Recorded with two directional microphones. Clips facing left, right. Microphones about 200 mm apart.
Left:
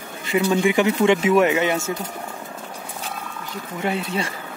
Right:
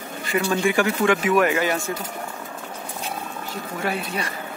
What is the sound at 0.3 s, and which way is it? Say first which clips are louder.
Speech: left 3 dB; 20° left (ahead or behind).